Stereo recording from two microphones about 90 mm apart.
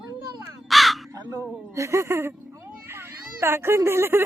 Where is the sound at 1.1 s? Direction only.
40° right (ahead or behind).